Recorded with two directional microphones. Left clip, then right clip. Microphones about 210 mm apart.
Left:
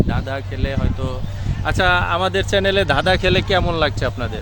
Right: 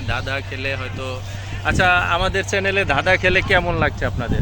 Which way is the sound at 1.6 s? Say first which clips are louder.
Right 1 dB; 50° left (ahead or behind).